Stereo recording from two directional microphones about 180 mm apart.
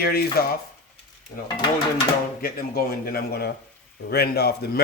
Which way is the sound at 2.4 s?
55° left (ahead or behind).